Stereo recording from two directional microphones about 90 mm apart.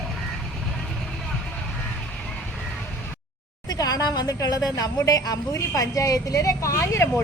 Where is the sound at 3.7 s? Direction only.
45° left (ahead or behind).